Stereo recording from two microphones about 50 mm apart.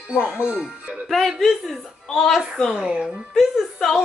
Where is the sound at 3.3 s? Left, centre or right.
Centre.